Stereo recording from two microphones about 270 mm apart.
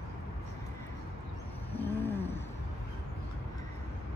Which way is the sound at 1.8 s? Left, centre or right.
Centre.